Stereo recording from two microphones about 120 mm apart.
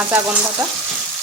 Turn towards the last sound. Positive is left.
turn(degrees=-20)  # may be behind; listen again after turning